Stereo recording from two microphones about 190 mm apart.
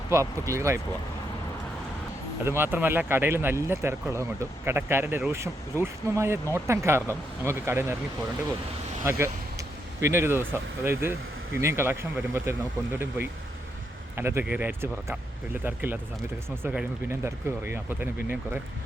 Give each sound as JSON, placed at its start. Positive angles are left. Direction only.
{"t": 0.1, "sound": "speech", "side_deg": -15}
{"t": 2.4, "sound": "speech", "side_deg": -10}
{"t": 9.0, "sound": "speech", "side_deg": -15}